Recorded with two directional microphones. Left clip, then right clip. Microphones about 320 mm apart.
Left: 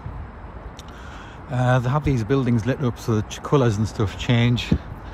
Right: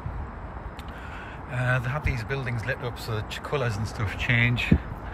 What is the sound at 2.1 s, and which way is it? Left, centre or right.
Speech, centre.